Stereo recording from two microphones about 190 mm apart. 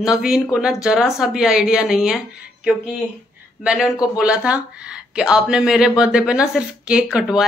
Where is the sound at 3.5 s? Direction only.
Centre (ahead or behind).